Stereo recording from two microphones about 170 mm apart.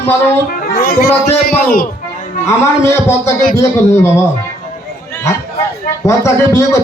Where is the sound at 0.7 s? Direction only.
65° left (ahead or behind).